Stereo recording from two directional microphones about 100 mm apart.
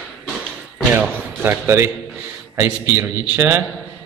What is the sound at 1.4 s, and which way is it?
A man's voice, 25° right (ahead or behind).